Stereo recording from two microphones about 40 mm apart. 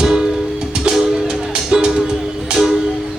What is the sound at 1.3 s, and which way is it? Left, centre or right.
Music, centre.